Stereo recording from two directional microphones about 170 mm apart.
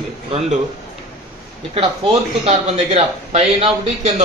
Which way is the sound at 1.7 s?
35° right (ahead or behind).